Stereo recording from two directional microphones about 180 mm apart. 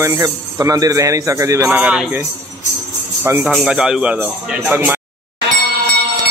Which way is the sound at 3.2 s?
10° right (ahead or behind).